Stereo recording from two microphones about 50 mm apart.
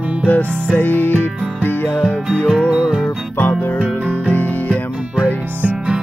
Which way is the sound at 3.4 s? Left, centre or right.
Left.